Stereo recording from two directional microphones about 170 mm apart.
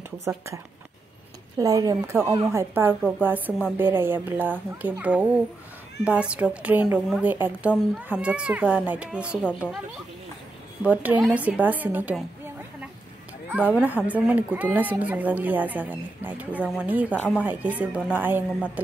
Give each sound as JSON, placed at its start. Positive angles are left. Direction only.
{"t": 0.2, "sound": "speech", "side_deg": -15}
{"t": 1.6, "sound": "speech", "side_deg": -20}
{"t": 2.5, "sound": "speech", "side_deg": -10}
{"t": 9.4, "sound": "speech", "side_deg": 10}
{"t": 10.8, "sound": "speech", "side_deg": -10}
{"t": 13.5, "sound": "speech", "side_deg": -10}